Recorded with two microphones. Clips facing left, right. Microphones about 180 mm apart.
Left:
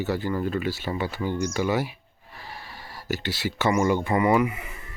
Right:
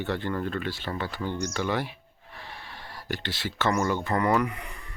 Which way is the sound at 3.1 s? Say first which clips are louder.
Left 5 dB; 10° left (ahead or behind).